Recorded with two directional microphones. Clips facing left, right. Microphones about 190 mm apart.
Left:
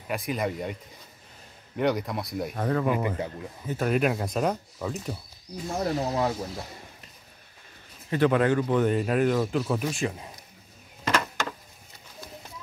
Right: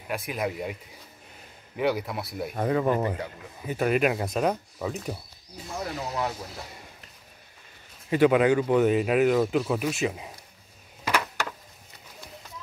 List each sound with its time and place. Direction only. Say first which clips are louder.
0.1 s speech: left 1 dB; centre (ahead or behind)
1.8 s speech: left 1 dB; 5° right (ahead or behind)
5.8 s speech: left 4 dB; 40° left (ahead or behind)
8.1 s speech: right 2 dB; 10° right (ahead or behind)
11.1 s a sound: left 1 dB; 15° right (ahead or behind)